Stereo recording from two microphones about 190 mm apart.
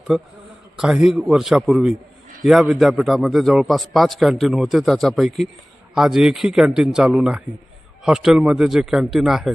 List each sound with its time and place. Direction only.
0.1 s a man's voice: 5° right (ahead or behind)